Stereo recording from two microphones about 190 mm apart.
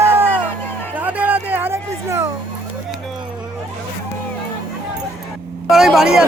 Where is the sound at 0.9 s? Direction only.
10° right (ahead or behind).